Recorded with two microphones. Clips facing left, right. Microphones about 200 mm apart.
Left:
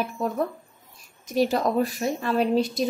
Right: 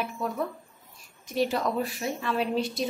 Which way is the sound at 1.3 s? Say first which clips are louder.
Left 4 dB; 40° left (ahead or behind).